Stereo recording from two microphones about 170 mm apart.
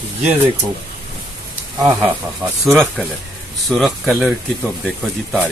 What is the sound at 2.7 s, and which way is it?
Speech, 5° left (ahead or behind).